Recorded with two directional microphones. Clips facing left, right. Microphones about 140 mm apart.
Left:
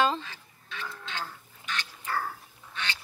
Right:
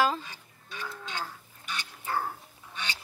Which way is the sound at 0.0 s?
10° right (ahead or behind).